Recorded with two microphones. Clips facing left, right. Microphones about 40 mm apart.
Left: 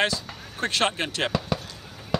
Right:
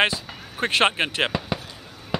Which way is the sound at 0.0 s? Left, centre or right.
Right.